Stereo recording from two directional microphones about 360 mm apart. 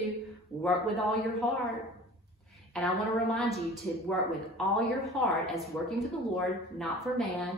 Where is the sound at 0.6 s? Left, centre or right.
Centre.